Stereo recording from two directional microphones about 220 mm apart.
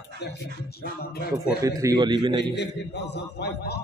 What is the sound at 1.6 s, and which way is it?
Speech, 15° right (ahead or behind).